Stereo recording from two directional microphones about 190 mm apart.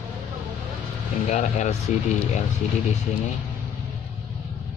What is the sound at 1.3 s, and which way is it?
Speech, 40° left (ahead or behind).